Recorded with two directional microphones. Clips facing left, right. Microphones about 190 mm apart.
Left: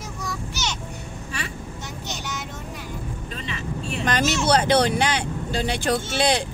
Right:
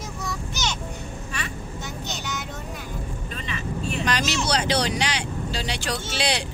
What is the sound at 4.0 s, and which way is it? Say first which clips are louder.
Speech: left 5 dB; 50° left (ahead or behind).